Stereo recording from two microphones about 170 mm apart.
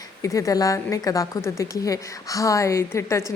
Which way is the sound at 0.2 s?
20° left (ahead or behind).